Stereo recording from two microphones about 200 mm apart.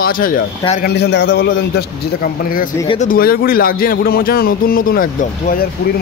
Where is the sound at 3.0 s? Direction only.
45° left (ahead or behind).